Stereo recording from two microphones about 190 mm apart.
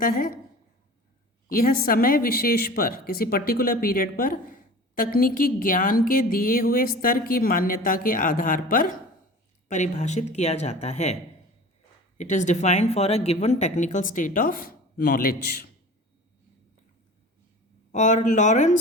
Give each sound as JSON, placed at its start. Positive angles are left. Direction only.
{"t": 0.0, "sound": "a woman's voice", "side_deg": 50}
{"t": 1.5, "sound": "a woman's voice", "side_deg": 50}
{"t": 17.9, "sound": "speech", "side_deg": 40}